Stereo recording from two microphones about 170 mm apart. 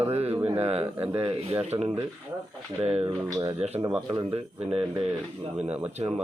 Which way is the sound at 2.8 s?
35° right (ahead or behind).